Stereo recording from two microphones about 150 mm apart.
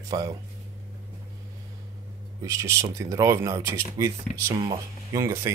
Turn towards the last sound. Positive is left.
turn(degrees=-20)  # may be behind; listen again after turning